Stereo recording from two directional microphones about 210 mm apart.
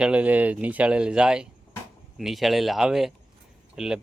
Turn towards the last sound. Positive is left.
turn(degrees=-5)  # may be behind; listen again after turning